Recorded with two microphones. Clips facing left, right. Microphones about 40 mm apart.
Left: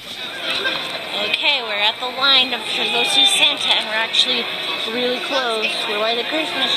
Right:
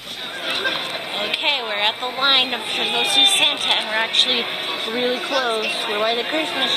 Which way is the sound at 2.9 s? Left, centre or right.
Centre.